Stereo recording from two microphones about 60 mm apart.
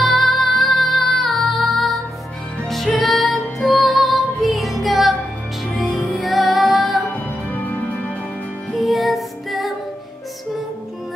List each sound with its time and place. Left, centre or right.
0.0 s music: centre
7.1 s music: left
8.7 s music: centre